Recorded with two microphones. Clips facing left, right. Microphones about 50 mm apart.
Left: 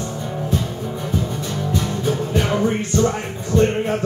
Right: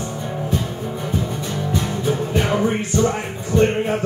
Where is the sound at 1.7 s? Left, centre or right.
Centre.